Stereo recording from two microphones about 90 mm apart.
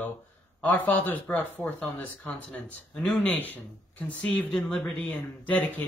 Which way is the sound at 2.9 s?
5° left (ahead or behind).